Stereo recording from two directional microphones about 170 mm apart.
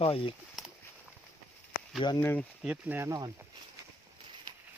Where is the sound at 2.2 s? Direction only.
15° left (ahead or behind).